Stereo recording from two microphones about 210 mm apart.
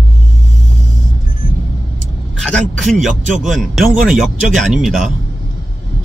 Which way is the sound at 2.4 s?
5° left (ahead or behind).